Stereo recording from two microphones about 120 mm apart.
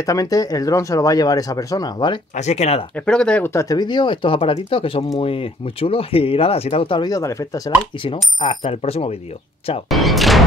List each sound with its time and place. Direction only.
0.0 s speech: 30° left (ahead or behind)
2.3 s speech: 65° left (ahead or behind)
3.1 s speech: 10° left (ahead or behind)
3.5 s speech: 30° left (ahead or behind); by 7.0 s 55° left (ahead or behind)
7.0 s speech: 30° left (ahead or behind)
8.0 s speech: 45° left (ahead or behind)
9.8 s speech: centre (ahead or behind)